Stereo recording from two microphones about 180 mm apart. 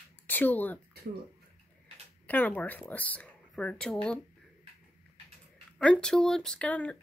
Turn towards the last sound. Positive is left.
turn(degrees=10)  # may be behind; listen again after turning